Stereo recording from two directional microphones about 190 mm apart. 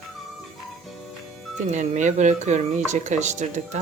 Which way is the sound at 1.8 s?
40° right (ahead or behind).